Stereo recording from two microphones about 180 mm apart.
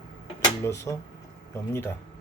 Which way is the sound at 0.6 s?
15° left (ahead or behind).